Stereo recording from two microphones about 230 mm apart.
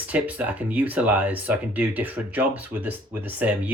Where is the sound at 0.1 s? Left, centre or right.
Centre.